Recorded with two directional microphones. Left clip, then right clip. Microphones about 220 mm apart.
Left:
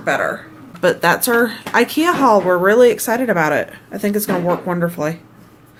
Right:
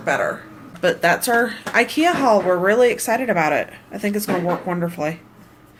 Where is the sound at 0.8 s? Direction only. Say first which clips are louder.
Left 3 dB; 20° left (ahead or behind).